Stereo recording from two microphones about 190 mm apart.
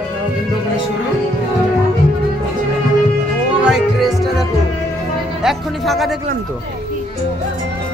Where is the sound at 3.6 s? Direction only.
Centre (ahead or behind).